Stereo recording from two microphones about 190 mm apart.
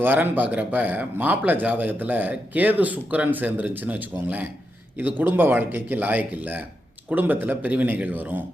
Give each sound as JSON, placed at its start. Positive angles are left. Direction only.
{"t": 0.0, "sound": "speech", "side_deg": -10}